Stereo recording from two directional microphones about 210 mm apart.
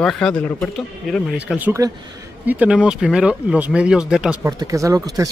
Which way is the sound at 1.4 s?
5° right (ahead or behind).